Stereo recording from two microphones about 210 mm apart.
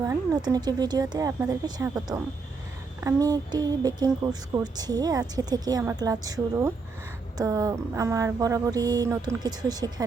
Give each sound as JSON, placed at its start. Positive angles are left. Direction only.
{"t": 0.0, "sound": "speech", "side_deg": -15}